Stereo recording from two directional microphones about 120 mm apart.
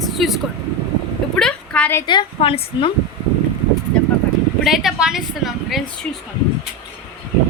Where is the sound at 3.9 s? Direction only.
10° left (ahead or behind).